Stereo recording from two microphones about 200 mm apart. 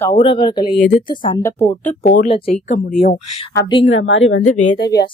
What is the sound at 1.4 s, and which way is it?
Speech, 15° left (ahead or behind).